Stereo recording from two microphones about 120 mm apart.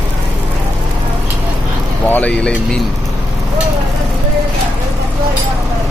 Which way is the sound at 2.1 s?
10° left (ahead or behind).